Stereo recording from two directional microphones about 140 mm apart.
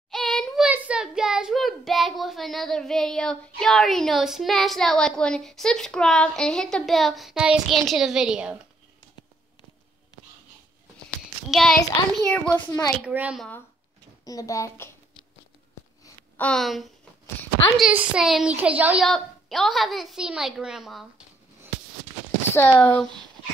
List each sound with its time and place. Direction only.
0.1 s child singing: centre (ahead or behind)
0.7 s speech: 10° right (ahead or behind)
11.5 s a child's voice: centre (ahead or behind); by 12.9 s 15° left (ahead or behind)
13.0 s speech: 10° right (ahead or behind)
14.2 s a child's voice: 25° left (ahead or behind)
16.3 s speech: 5° left (ahead or behind); by 19.0 s 10° right (ahead or behind)
19.0 s speech: centre (ahead or behind)
22.5 s a child's voice: 15° left (ahead or behind)